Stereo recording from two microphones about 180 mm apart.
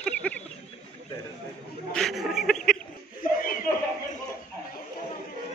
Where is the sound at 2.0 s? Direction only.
Centre (ahead or behind).